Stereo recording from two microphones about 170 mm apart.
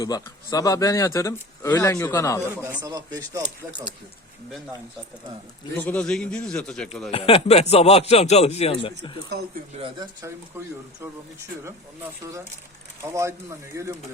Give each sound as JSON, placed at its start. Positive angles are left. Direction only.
{"t": 0.0, "sound": "speech", "side_deg": 20}
{"t": 2.8, "sound": "speech", "side_deg": -20}
{"t": 5.7, "sound": "a man's voice", "side_deg": 10}
{"t": 7.1, "sound": "speech", "side_deg": 35}
{"t": 9.7, "sound": "speech", "side_deg": -30}
{"t": 13.7, "sound": "speech", "side_deg": -20}